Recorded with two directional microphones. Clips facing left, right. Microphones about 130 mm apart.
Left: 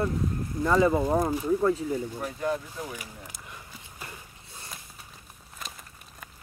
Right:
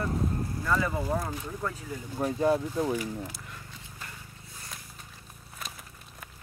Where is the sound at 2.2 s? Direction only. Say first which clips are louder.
Right 5 dB; 30° right (ahead or behind).